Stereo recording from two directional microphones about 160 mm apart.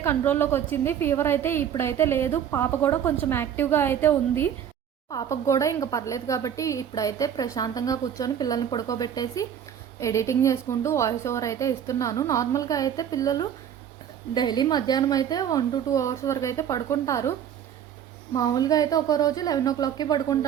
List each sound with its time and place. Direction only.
0.0 s a woman's voice: 15° left (ahead or behind)
18.3 s speech: 25° left (ahead or behind)